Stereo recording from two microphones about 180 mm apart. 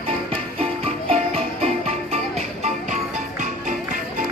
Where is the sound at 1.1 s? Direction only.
35° right (ahead or behind).